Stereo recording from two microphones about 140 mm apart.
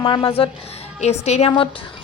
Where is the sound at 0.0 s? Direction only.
40° left (ahead or behind).